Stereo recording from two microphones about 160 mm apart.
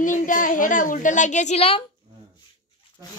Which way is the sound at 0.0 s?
55° left (ahead or behind).